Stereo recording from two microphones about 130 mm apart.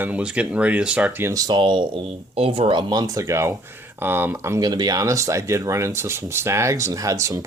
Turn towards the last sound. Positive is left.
turn(degrees=-25)  # may be behind; listen again after turning